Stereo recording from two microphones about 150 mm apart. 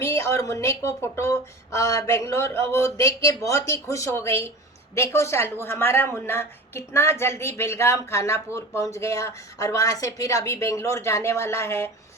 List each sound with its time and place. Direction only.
0.0 s a woman's voice: 20° left (ahead or behind)